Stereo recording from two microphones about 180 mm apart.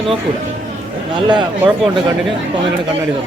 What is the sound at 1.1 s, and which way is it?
Speech, 25° right (ahead or behind).